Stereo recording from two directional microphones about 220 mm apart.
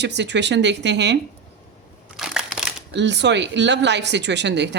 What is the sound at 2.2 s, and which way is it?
Crushing, centre (ahead or behind).